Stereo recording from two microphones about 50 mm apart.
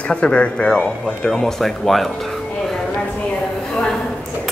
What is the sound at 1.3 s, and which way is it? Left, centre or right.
Speech, centre.